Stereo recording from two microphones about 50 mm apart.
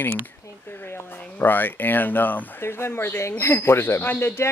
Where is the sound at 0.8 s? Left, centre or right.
Left.